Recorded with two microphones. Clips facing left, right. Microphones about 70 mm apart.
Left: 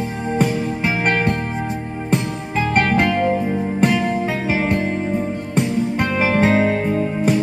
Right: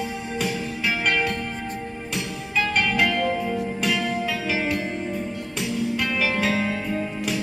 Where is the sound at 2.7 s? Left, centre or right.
Left.